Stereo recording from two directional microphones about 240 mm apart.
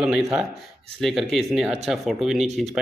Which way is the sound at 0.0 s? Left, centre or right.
Centre.